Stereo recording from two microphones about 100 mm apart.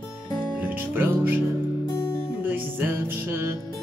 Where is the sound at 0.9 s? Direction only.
20° right (ahead or behind).